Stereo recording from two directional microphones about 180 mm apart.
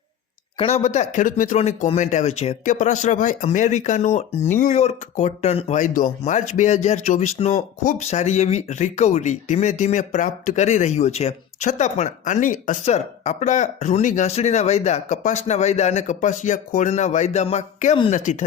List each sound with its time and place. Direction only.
0.6 s speech: 35° left (ahead or behind)